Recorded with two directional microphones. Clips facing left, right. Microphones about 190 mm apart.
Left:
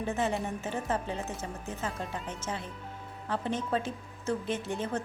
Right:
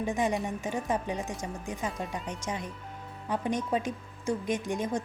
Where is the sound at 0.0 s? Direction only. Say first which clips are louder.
Right 2 dB; 15° right (ahead or behind).